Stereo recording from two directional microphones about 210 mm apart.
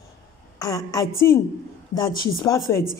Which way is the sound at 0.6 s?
20° left (ahead or behind).